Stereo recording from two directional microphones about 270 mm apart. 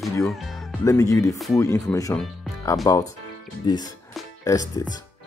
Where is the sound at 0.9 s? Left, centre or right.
Centre.